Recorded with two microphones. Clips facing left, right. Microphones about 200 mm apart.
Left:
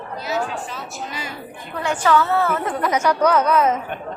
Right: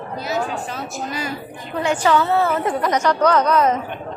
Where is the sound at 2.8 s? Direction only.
5° left (ahead or behind).